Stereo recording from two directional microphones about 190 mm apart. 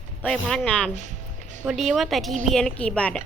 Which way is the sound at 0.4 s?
5° left (ahead or behind).